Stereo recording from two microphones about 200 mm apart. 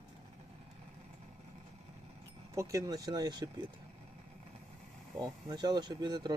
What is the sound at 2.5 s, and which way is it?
Speech, 15° right (ahead or behind).